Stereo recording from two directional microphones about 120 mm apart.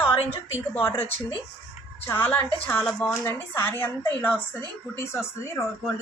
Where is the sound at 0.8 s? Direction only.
15° left (ahead or behind).